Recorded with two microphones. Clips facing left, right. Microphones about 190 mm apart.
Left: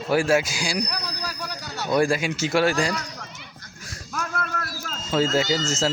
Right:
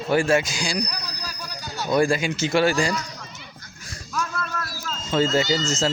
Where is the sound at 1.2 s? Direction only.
65° left (ahead or behind).